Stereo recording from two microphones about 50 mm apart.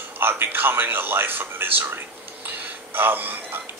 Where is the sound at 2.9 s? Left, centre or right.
Right.